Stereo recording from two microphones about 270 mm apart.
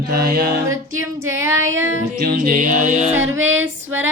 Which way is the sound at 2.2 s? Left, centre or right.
Right.